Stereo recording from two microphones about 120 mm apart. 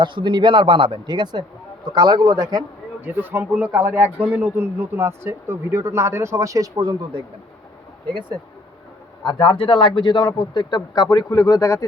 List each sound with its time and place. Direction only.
0.0 s speech: 40° right (ahead or behind)
3.0 s speech: 15° right (ahead or behind); by 7.3 s 40° right (ahead or behind)
9.2 s a man's voice: 45° left (ahead or behind); by 11.9 s 30° left (ahead or behind)